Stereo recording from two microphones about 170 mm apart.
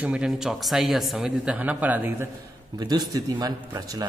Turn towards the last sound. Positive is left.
turn(degrees=-20)  # may be behind; listen again after turning